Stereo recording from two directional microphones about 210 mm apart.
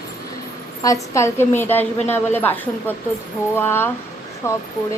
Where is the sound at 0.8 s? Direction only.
15° left (ahead or behind).